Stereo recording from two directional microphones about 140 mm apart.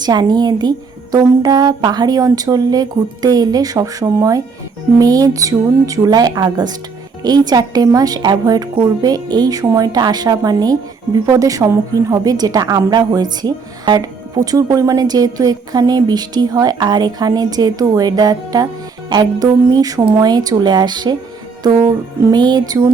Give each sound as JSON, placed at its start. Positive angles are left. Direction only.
{"t": 0.0, "sound": "a woman's voice", "side_deg": -30}